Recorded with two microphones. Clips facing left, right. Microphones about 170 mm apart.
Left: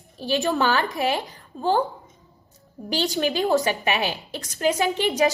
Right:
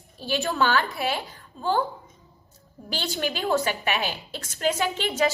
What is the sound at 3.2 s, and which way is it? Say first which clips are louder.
A woman's voice: left 3 dB; 15° left (ahead or behind).